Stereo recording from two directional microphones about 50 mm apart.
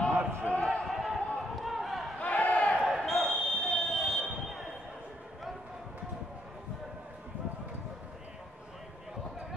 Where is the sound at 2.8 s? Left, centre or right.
Centre.